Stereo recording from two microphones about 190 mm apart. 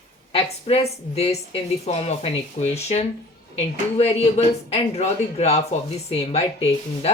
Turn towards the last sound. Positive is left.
turn(degrees=35)  # may be behind; listen again after turning